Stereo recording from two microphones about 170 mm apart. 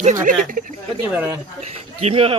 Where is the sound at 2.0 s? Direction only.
35° right (ahead or behind).